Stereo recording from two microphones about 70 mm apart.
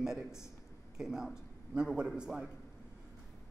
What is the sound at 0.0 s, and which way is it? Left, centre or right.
A man's voice, centre.